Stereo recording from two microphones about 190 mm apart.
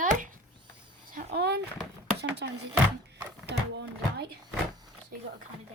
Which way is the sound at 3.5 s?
65° right (ahead or behind).